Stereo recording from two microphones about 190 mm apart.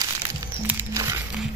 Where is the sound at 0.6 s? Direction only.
15° right (ahead or behind).